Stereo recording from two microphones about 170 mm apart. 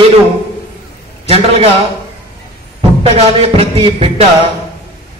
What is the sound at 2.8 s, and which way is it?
A man's voice, 35° right (ahead or behind).